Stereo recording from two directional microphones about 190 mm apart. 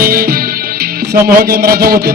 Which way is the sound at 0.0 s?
50° right (ahead or behind).